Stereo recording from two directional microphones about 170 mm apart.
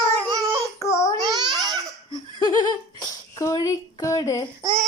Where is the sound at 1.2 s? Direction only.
25° right (ahead or behind).